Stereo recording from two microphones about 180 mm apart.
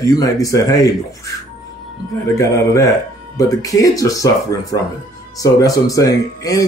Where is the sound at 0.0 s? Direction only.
20° left (ahead or behind).